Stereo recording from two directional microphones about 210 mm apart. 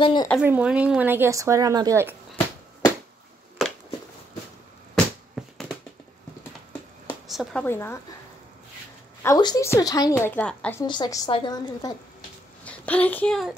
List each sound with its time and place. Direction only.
0.0 s a woman's voice: 20° left (ahead or behind)
0.4 s speech: 5° right (ahead or behind)
3.6 s a sound: centre (ahead or behind)
4.9 s a sound: centre (ahead or behind)
7.2 s speech: centre (ahead or behind)
7.6 s a woman's voice: 10° left (ahead or behind)
9.2 s a woman's voice: 15° left (ahead or behind)
10.9 s a woman's voice: 20° left (ahead or behind)
12.6 s speech: 5° left (ahead or behind)